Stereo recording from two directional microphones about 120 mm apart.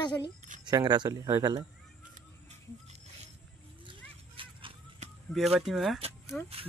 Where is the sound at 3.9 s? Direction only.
45° right (ahead or behind).